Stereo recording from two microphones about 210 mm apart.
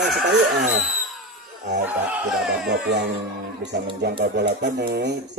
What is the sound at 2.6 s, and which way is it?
Speech, 55° right (ahead or behind).